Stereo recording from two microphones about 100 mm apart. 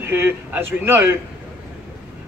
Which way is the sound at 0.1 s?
20° right (ahead or behind).